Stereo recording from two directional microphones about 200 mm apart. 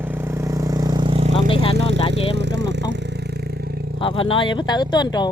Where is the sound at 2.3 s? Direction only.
60° right (ahead or behind).